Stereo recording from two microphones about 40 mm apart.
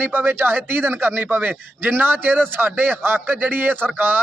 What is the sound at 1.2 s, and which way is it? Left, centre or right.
A man's voice, right.